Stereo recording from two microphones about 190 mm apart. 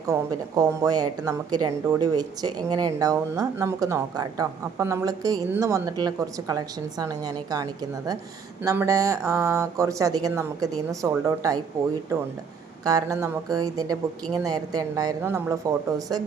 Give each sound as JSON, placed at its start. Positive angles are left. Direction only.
{"t": 0.1, "sound": "a woman's voice", "side_deg": -20}
{"t": 12.8, "sound": "a woman's voice", "side_deg": -20}